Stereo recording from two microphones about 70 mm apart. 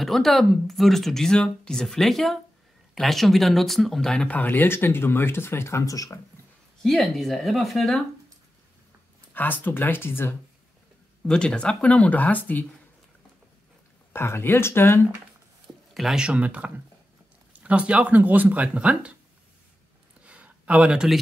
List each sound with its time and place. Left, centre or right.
0.0 s speech: centre
4.3 s speech: left
5.9 s speech: left
6.8 s speech: centre
9.3 s speech: left
11.2 s speech: centre
14.1 s speech: left
15.6 s a sound: centre
16.2 s speech: centre
20.2 s a sound: centre